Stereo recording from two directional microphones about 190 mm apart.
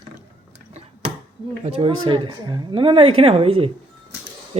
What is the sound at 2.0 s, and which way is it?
Speech, 25° right (ahead or behind).